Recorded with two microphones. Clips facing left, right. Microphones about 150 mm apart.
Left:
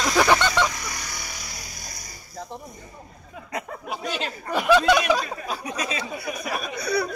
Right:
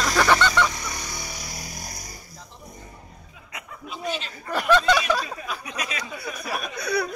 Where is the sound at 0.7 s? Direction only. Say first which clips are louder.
Right 1 dB; 20° right (ahead or behind).